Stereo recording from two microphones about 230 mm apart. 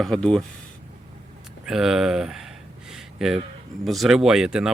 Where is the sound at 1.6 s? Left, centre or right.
Centre.